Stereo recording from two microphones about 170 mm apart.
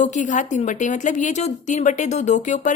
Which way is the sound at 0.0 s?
45° left (ahead or behind).